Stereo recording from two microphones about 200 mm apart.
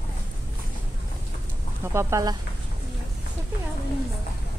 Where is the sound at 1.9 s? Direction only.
15° right (ahead or behind).